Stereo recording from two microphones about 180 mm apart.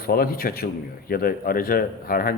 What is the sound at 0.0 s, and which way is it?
Speech, 55° left (ahead or behind).